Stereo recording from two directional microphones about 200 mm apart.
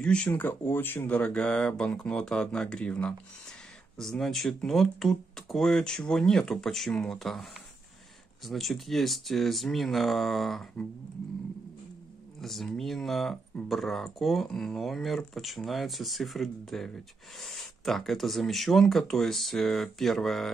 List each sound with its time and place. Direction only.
0.0 s speech: 5° left (ahead or behind)
8.5 s speech: centre (ahead or behind)
12.4 s speech: centre (ahead or behind)